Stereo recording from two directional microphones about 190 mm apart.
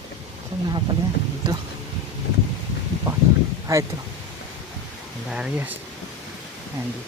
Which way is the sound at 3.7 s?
15° right (ahead or behind).